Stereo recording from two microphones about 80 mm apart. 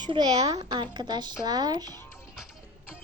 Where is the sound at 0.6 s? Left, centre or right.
Right.